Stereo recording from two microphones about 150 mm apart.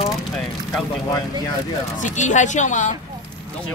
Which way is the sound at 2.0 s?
55° left (ahead or behind).